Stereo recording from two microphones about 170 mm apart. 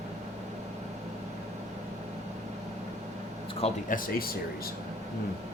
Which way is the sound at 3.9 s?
55° left (ahead or behind).